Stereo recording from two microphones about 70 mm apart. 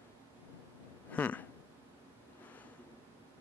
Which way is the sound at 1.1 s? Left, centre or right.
Left.